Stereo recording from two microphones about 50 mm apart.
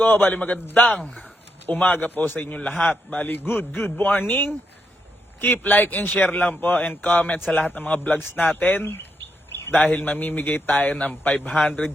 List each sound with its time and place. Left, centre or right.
0.0 s a man's voice: left
1.2 s a sound: left
1.9 s a man's voice: left
2.6 s a man's voice: left
5.4 s a man's voice: left
8.4 s a man's voice: left
8.8 s bird: left
9.7 s a man's voice: left